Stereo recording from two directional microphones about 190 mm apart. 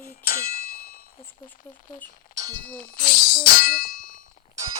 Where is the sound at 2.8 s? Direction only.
50° left (ahead or behind).